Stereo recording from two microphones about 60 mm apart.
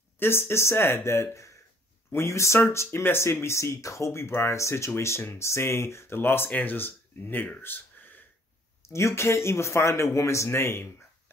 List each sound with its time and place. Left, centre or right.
0.2 s speech: left
7.6 s a sound: left
8.8 s speech: left